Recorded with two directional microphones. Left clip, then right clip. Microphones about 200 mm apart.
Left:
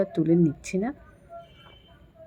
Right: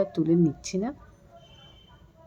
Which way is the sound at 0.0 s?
Centre (ahead or behind).